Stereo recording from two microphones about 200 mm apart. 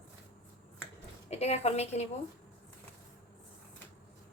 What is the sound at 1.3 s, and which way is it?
Speech, 30° left (ahead or behind).